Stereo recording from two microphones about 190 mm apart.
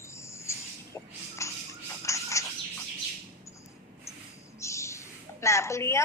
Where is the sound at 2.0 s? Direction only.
15° left (ahead or behind).